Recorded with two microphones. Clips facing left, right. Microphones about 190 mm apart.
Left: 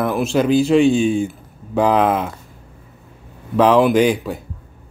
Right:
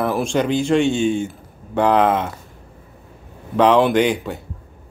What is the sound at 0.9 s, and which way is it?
Speech, 90° left.